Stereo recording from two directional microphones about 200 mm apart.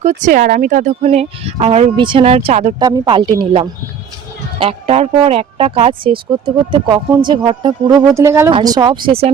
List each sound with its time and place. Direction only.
0.0 s speech: 40° right (ahead or behind)
2.7 s speech: 20° right (ahead or behind)